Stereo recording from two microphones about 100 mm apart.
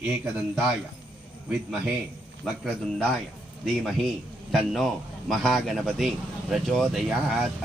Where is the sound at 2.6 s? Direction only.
10° left (ahead or behind).